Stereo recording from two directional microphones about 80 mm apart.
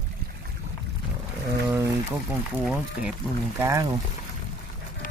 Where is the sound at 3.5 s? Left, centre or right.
Right.